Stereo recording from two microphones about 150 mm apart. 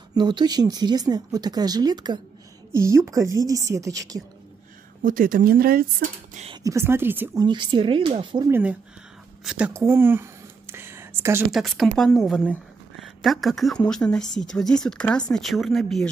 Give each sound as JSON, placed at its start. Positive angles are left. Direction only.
{"t": 0.1, "sound": "speech", "side_deg": -30}
{"t": 5.0, "sound": "speech", "side_deg": -65}
{"t": 6.5, "sound": "speech", "side_deg": -20}
{"t": 7.3, "sound": "speech", "side_deg": -30}
{"t": 8.5, "sound": "speech", "side_deg": -15}
{"t": 9.4, "sound": "speech", "side_deg": -5}
{"t": 9.8, "sound": "a sound", "side_deg": -15}
{"t": 11.5, "sound": "speech", "side_deg": 0}